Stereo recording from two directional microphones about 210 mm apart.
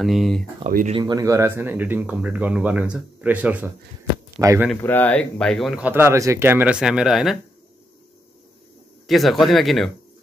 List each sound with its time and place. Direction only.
0.0 s speech: centre (ahead or behind)
0.7 s speech: 40° right (ahead or behind)
0.9 s speech: 20° right (ahead or behind)
4.6 s speech: 10° left (ahead or behind)
9.0 s speech: centre (ahead or behind)